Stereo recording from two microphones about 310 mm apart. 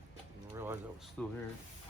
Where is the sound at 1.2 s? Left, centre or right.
Centre.